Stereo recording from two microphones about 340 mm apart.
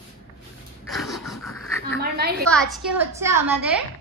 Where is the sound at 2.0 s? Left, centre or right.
Right.